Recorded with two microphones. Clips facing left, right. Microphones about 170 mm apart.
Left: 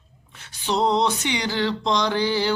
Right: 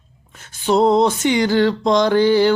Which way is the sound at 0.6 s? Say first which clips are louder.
Right 7 dB; 50° right (ahead or behind).